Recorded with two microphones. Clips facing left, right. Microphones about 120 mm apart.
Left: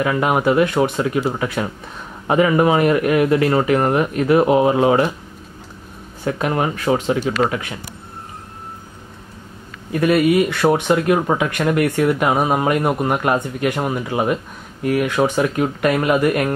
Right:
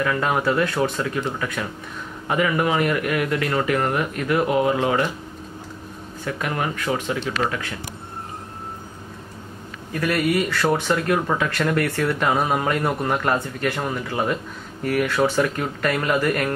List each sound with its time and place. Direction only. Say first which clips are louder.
0.0 s speech: left 4 dB; 20° left (ahead or behind)
6.2 s speech: left 6 dB; 25° left (ahead or behind)
9.9 s speech: left 7 dB; 20° left (ahead or behind)